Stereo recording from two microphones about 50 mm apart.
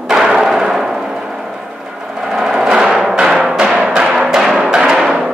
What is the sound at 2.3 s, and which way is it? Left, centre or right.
Music, centre.